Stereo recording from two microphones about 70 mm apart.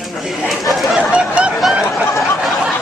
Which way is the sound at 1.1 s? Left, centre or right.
Centre.